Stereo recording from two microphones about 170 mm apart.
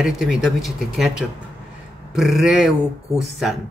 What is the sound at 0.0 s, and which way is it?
Speech, 5° right (ahead or behind).